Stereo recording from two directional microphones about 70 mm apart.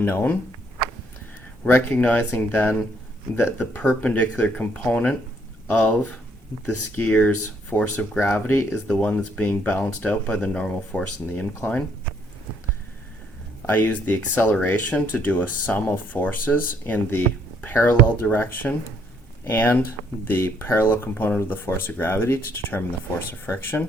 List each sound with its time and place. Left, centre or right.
0.0 s speech: left
1.6 s speech: left
3.8 s speech: left
7.0 s speech: left
8.2 s speech: left
8.9 s speech: centre
9.8 s speech: centre
13.7 s speech: left